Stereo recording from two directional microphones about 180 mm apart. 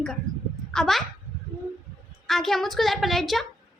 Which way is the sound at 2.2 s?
Centre (ahead or behind).